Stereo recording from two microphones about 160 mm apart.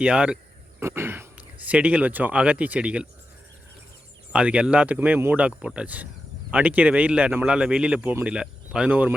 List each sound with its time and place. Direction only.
0.0 s speech: 5° right (ahead or behind)
4.3 s speech: 5° right (ahead or behind)